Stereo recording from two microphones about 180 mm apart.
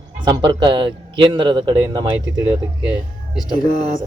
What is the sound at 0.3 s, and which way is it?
A man's voice, 25° right (ahead or behind).